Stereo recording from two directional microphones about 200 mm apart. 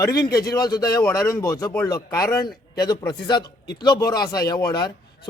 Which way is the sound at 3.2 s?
20° left (ahead or behind).